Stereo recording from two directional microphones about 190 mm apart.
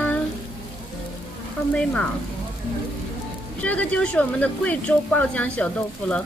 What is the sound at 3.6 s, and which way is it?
Speech, 5° left (ahead or behind).